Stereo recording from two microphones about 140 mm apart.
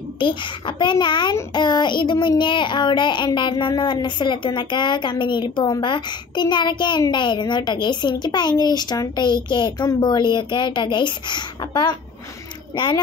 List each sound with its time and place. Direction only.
0.2 s child singing: 35° left (ahead or behind)